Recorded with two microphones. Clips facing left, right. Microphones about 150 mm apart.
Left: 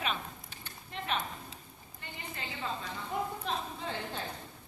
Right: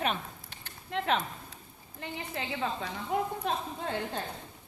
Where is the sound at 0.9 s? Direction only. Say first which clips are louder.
Right 6 dB; 90° right.